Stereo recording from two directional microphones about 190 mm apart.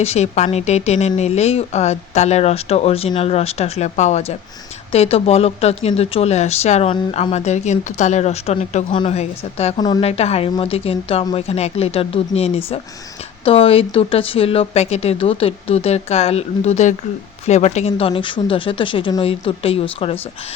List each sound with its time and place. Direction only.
0.0 s speech: 35° left (ahead or behind)
9.8 s speech: 20° left (ahead or behind)
10.1 s speech: 35° left (ahead or behind)